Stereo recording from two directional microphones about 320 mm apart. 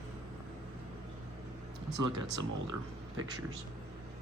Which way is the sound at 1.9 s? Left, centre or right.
Right.